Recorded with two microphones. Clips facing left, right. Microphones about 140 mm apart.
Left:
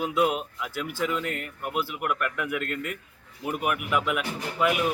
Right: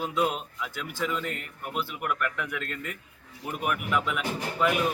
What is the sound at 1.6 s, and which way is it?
Speech, 10° left (ahead or behind).